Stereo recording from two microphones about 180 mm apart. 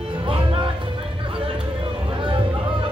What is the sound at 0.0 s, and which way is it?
Music, 30° right (ahead or behind).